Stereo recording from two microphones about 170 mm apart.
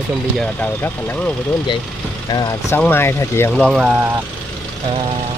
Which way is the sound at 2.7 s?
15° left (ahead or behind).